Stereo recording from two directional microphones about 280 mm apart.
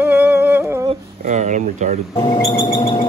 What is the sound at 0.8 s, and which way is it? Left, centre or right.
Speech, right.